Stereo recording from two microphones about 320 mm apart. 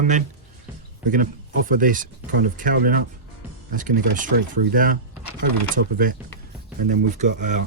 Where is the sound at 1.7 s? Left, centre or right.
Right.